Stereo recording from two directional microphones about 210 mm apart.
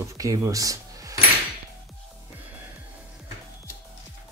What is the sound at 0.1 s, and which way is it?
Speech, 15° right (ahead or behind).